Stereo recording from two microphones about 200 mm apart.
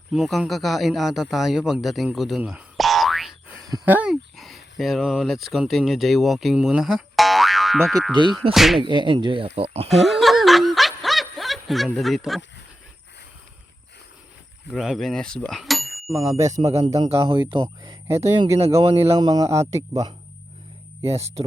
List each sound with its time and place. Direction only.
0.1 s a man's voice: centre (ahead or behind)
8.2 s speech: 25° right (ahead or behind)
8.5 s music: centre (ahead or behind)
8.8 s speech: 25° right (ahead or behind)
9.9 s snicker: centre (ahead or behind)
14.7 s speech: centre (ahead or behind)
16.0 s speech: 15° right (ahead or behind)
16.6 s speech: 30° right (ahead or behind)
18.1 s speech: 15° right (ahead or behind)
18.8 s speech: 30° right (ahead or behind)
19.2 s speech: 20° right (ahead or behind)
21.0 s speech: 30° right (ahead or behind)